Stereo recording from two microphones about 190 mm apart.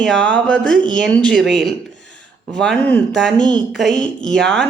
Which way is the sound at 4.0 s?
40° left (ahead or behind).